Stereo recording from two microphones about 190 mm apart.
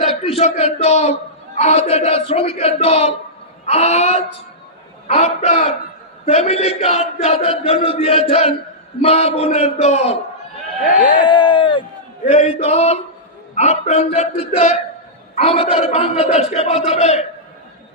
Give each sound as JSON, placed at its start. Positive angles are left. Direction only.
{"t": 0.0, "sound": "speech", "side_deg": 35}
{"t": 10.9, "sound": "a sound", "side_deg": 45}
{"t": 11.3, "sound": "speech", "side_deg": 25}
{"t": 12.2, "sound": "speech", "side_deg": 35}